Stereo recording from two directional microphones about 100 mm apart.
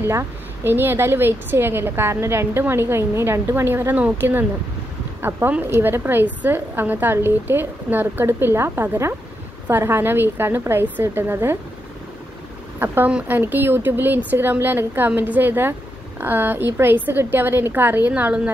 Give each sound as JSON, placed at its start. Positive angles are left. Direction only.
{"t": 0.0, "sound": "a woman's voice", "side_deg": -25}
{"t": 12.7, "sound": "a woman's voice", "side_deg": -20}